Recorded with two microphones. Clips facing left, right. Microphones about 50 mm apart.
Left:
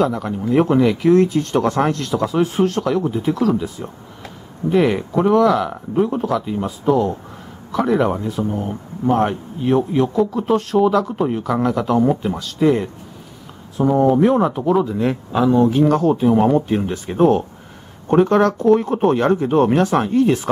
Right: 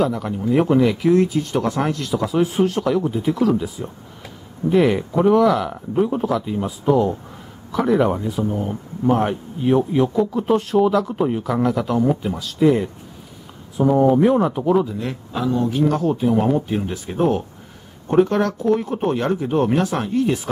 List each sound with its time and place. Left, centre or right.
0.0 s speech: centre
15.0 s speech: centre
15.7 s speech: centre